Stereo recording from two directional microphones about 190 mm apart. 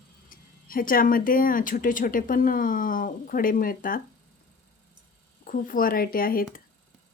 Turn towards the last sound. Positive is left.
turn(degrees=50)  # may be behind; listen again after turning